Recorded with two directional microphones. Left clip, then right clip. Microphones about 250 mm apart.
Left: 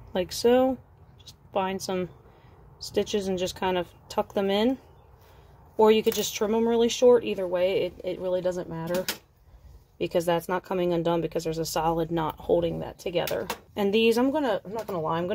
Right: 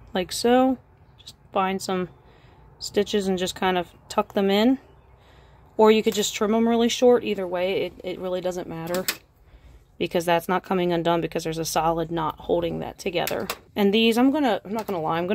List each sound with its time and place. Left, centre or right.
0.1 s a woman's voice: centre
5.8 s speech: centre